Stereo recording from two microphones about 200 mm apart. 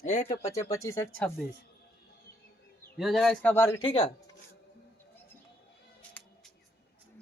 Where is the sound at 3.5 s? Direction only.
10° left (ahead or behind).